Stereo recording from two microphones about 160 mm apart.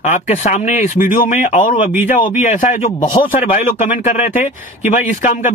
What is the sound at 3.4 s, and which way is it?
Speech, 60° left (ahead or behind).